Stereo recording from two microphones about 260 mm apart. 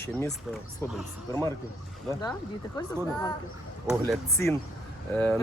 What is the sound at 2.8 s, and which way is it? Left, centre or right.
Speech, centre.